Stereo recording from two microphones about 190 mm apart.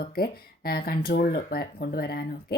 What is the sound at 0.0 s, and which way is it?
Speech, 50° left (ahead or behind).